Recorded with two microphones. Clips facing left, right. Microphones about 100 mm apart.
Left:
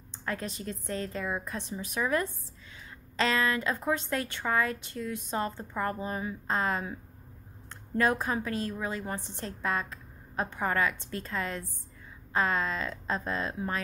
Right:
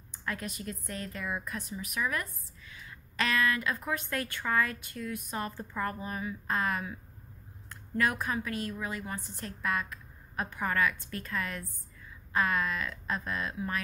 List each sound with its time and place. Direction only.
0.1 s a woman's voice: 30° left (ahead or behind)